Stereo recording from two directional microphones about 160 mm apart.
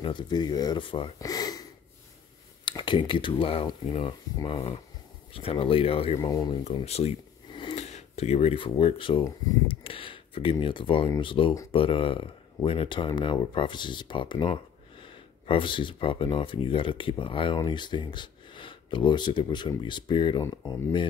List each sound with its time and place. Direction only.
0.0 s speech: 30° left (ahead or behind)
2.6 s speech: 30° left (ahead or behind)
6.1 s speech: 25° left (ahead or behind)
6.6 s a sound: 40° left (ahead or behind)
7.8 s speech: 45° left (ahead or behind)